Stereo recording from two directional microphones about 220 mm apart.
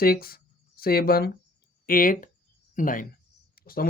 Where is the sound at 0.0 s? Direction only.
45° left (ahead or behind).